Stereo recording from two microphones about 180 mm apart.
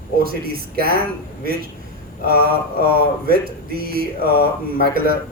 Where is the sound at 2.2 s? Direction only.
55° right (ahead or behind).